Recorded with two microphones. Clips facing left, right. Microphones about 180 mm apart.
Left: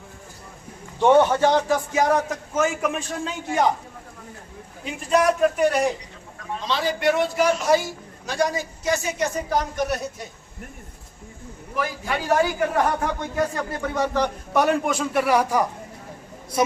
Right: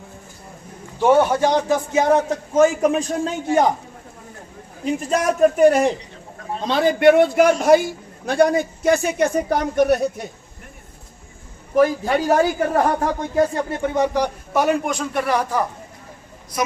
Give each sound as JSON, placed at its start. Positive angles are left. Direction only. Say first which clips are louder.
{"t": 0.9, "sound": "a man's voice", "louder": "right 1 dB", "side_deg": -5}
{"t": 4.9, "sound": "a woman's voice", "louder": "even", "side_deg": -45}
{"t": 11.7, "sound": "a man's voice", "louder": "right 10 dB", "side_deg": -40}
{"t": 14.5, "sound": "a man's voice", "louder": "right 1 dB", "side_deg": 0}